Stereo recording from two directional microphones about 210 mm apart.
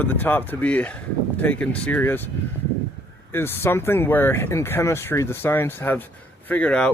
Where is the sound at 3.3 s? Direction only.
10° left (ahead or behind).